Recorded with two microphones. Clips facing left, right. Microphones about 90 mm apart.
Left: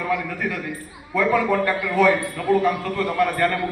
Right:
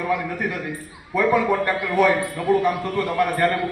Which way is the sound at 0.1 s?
20° right (ahead or behind).